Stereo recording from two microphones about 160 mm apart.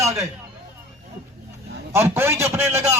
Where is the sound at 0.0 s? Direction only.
20° right (ahead or behind).